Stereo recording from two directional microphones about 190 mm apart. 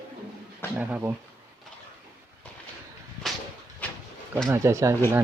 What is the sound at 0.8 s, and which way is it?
Speech, 10° right (ahead or behind).